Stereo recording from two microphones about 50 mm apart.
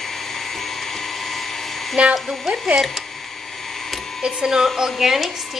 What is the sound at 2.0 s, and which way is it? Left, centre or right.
Speech, right.